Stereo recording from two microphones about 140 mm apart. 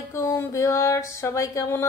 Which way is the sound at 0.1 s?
20° left (ahead or behind).